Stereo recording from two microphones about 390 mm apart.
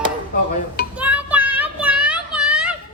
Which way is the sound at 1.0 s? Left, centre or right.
Centre.